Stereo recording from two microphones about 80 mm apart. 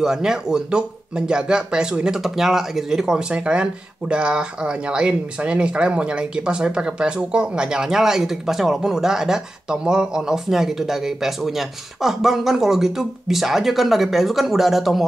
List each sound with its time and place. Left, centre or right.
0.0 s speech: centre